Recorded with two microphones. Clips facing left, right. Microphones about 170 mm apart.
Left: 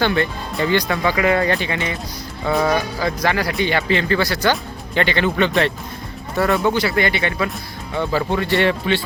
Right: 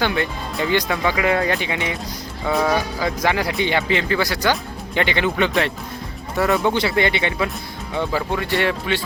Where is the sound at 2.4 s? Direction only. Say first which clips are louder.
Left 1 dB; centre (ahead or behind).